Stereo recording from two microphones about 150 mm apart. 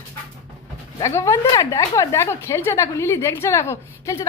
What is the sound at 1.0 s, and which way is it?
A woman's voice, 20° left (ahead or behind).